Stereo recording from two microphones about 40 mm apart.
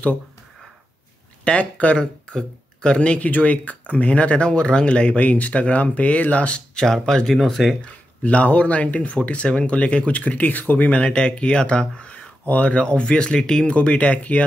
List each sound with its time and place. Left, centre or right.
1.4 s speech: left
6.7 s speech: centre
7.3 s speech: centre
7.8 s speech: left
12.4 s speech: left